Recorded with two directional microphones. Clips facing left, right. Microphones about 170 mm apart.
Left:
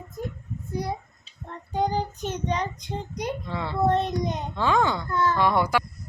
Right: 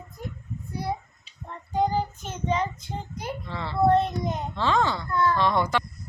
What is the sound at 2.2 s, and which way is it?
A child's voice, 15° left (ahead or behind).